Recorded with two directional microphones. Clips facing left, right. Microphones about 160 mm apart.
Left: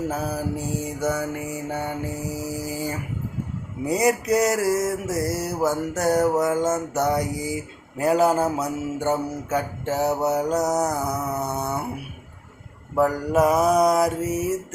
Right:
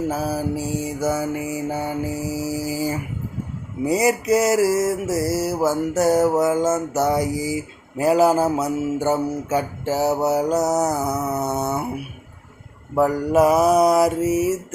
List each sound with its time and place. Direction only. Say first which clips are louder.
0.1 s mantra: right 3 dB; 5° right (ahead or behind)
13.0 s mantra: right 3 dB; 5° right (ahead or behind)